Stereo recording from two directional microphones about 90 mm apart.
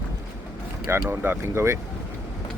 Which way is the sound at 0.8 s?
25° right (ahead or behind).